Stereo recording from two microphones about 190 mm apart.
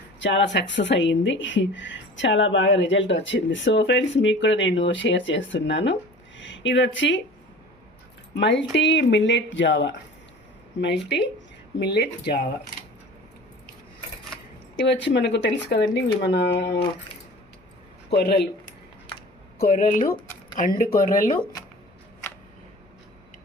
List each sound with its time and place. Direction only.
0.2 s speech: 70° left (ahead or behind)
8.4 s speech: 70° left (ahead or behind)
14.8 s speech: 65° left (ahead or behind)
18.1 s speech: 60° left (ahead or behind)
19.5 s speech: 50° left (ahead or behind)
20.1 s a sound: 15° left (ahead or behind)
20.7 s speech: 45° left (ahead or behind)